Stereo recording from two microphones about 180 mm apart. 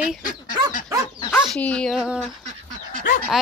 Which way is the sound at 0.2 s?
45° left (ahead or behind).